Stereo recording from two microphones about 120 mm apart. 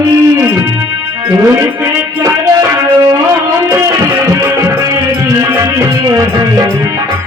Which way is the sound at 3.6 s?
25° right (ahead or behind).